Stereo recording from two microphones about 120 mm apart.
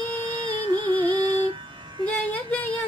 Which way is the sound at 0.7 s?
40° right (ahead or behind).